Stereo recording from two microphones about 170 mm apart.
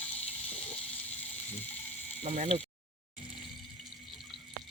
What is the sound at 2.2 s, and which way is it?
Speech, 40° right (ahead or behind).